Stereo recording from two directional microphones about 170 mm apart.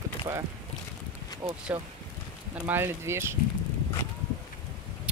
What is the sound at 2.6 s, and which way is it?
Speech, 15° right (ahead or behind).